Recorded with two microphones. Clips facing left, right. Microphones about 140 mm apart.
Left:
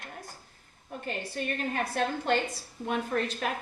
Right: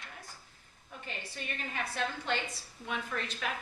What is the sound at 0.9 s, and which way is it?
Speech, 50° left (ahead or behind).